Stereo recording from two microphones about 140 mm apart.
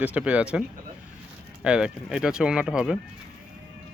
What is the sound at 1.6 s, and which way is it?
Speech, 5° right (ahead or behind).